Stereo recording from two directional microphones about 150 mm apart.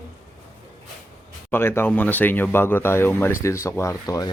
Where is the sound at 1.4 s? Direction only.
15° left (ahead or behind).